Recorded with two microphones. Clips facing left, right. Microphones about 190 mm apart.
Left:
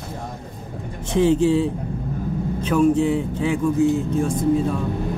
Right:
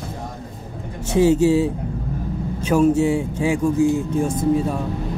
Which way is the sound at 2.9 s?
10° right (ahead or behind).